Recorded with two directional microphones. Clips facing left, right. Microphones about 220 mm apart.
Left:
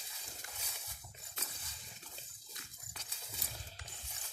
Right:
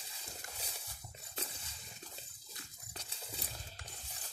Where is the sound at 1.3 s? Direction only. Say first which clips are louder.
Right 6 dB; 30° right (ahead or behind).